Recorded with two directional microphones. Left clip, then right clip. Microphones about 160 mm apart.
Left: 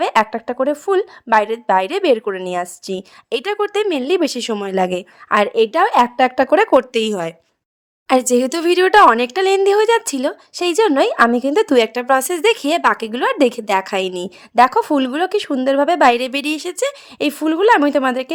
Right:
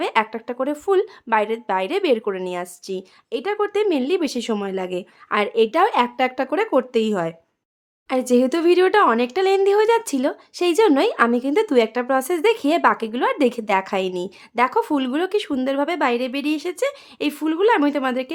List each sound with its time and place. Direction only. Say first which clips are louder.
0.0 s a woman's voice: left 5 dB; 30° left (ahead or behind)
3.2 s a woman's voice: left 3 dB; 45° left (ahead or behind); by 16.0 s 25° left (ahead or behind)
16.0 s speech: left 7 dB; 40° left (ahead or behind)